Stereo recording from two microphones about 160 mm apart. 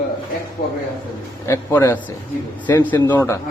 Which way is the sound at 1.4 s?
15° left (ahead or behind).